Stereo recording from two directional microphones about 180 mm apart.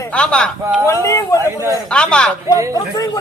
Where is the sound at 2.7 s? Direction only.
20° left (ahead or behind).